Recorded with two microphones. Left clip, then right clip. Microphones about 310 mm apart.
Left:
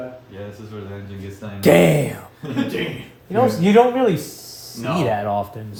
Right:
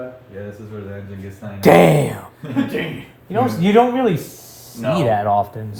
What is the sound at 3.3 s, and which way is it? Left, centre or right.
Speech, right.